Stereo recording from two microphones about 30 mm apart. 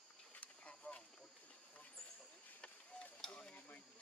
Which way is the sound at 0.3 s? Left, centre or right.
Left.